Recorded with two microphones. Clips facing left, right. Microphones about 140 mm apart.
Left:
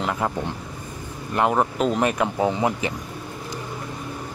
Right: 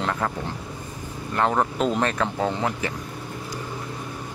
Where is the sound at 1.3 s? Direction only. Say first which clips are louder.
Left 2 dB; 10° left (ahead or behind).